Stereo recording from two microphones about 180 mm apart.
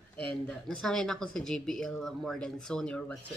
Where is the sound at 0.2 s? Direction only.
5° left (ahead or behind).